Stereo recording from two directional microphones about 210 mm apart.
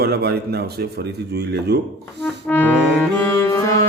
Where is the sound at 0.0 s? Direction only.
50° right (ahead or behind).